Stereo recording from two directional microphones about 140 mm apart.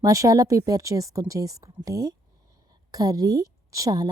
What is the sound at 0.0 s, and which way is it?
A woman's voice, 25° right (ahead or behind).